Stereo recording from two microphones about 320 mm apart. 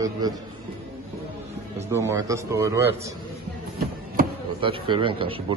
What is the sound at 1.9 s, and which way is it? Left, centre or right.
A man's voice, centre.